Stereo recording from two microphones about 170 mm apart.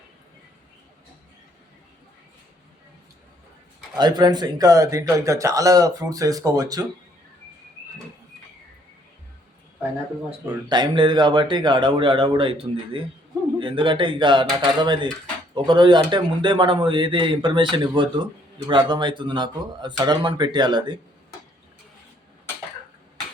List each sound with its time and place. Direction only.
3.9 s speech: 25° right (ahead or behind)
10.7 s speech: 25° right (ahead or behind)